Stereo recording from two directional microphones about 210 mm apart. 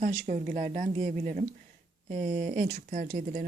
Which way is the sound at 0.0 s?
40° right (ahead or behind).